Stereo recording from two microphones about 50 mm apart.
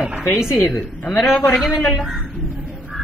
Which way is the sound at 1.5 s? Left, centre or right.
Centre.